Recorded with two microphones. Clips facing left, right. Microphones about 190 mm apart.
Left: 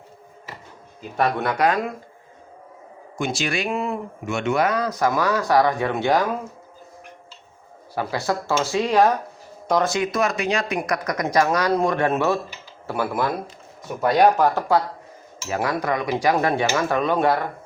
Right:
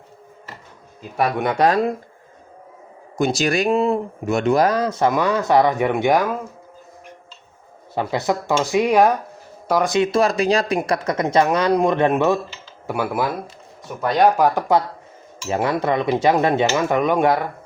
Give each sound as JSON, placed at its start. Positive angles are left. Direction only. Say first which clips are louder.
{"t": 1.1, "sound": "speech", "louder": "right 1 dB", "side_deg": -10}
{"t": 1.5, "sound": "speech", "louder": "right 4 dB", "side_deg": -30}
{"t": 3.2, "sound": "speech", "louder": "right 6 dB", "side_deg": -40}
{"t": 7.9, "sound": "speech", "louder": "right 3 dB", "side_deg": -20}
{"t": 9.9, "sound": "speech", "louder": "right 5 dB", "side_deg": -25}
{"t": 13.8, "sound": "speech", "louder": "even", "side_deg": 0}
{"t": 14.3, "sound": "speech", "louder": "right 2 dB", "side_deg": -10}
{"t": 15.4, "sound": "speech", "louder": "right 3 dB", "side_deg": -25}